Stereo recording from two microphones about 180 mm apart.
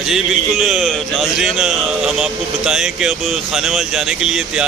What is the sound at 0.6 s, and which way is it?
Speech, centre (ahead or behind).